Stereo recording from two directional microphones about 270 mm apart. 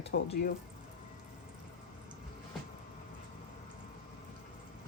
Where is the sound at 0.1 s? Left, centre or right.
Left.